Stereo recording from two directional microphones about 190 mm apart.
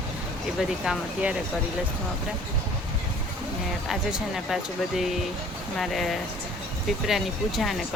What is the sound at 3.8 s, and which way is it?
Speech, centre (ahead or behind).